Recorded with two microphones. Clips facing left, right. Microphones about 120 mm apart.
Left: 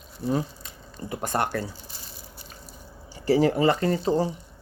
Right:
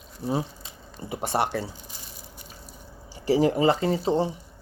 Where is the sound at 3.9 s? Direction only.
5° right (ahead or behind).